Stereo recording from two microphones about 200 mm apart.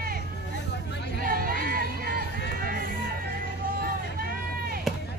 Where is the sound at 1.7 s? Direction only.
45° right (ahead or behind).